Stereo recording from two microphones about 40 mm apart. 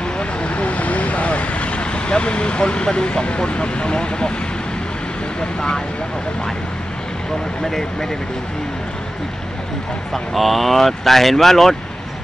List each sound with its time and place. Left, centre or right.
0.2 s vehicle: left
10.1 s speech: centre